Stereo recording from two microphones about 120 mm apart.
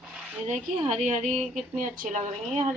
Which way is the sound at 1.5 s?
90° right.